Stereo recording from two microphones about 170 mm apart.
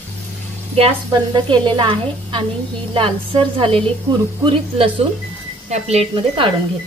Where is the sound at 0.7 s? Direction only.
30° right (ahead or behind).